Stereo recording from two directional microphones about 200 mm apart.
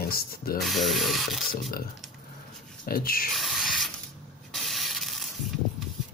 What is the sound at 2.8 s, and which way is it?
Speech, 45° left (ahead or behind).